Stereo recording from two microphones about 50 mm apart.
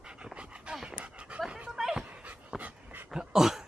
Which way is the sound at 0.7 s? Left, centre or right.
Centre.